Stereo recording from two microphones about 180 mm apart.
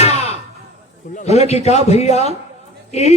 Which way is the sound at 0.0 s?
35° left (ahead or behind).